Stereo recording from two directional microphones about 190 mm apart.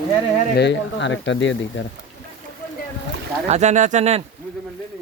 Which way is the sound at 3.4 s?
35° right (ahead or behind).